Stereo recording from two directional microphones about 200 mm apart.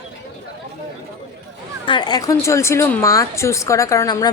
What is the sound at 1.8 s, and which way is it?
Speech, 20° left (ahead or behind).